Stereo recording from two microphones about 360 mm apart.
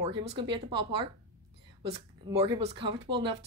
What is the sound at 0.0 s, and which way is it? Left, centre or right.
Speech, centre.